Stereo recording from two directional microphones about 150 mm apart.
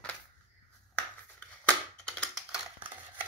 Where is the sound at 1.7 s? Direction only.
5° left (ahead or behind).